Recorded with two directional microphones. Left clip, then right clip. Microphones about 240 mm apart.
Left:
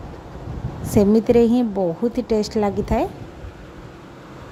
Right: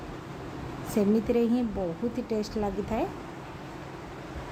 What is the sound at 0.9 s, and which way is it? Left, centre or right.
Speech, left.